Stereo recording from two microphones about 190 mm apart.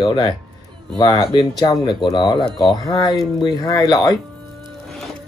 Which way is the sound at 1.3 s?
20° left (ahead or behind).